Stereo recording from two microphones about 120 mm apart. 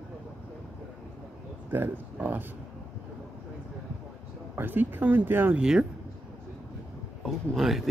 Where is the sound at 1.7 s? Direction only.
15° right (ahead or behind).